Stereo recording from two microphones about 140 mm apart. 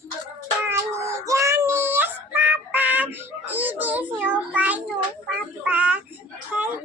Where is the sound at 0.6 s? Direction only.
20° right (ahead or behind).